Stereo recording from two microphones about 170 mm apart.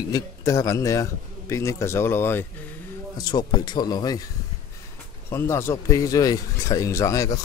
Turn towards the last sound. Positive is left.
turn(degrees=20)  # may be behind; listen again after turning